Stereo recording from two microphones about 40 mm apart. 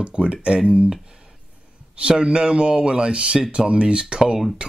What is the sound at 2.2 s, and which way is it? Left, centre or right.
Speech, right.